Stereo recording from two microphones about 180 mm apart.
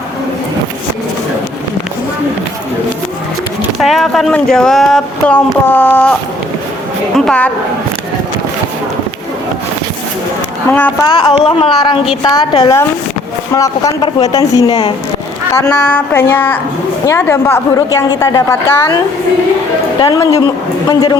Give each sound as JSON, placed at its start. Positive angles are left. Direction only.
{"t": 3.8, "sound": "speech", "side_deg": 0}
{"t": 7.2, "sound": "speech", "side_deg": 5}
{"t": 10.7, "sound": "a woman's voice", "side_deg": 10}
{"t": 11.1, "sound": "a woman's voice", "side_deg": 30}
{"t": 12.2, "sound": "a woman's voice", "side_deg": 20}
{"t": 20.0, "sound": "speech", "side_deg": 20}